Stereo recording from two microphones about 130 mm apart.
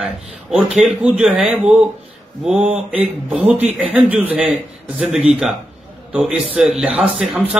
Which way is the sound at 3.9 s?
10° right (ahead or behind).